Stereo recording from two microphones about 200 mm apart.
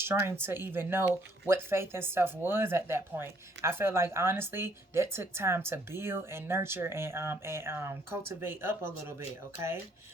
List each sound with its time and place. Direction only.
0.0 s speech: 10° right (ahead or behind)